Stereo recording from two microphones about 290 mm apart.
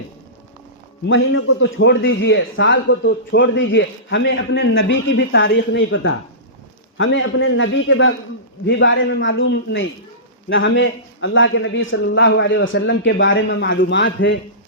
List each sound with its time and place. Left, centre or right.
1.0 s a man's voice: left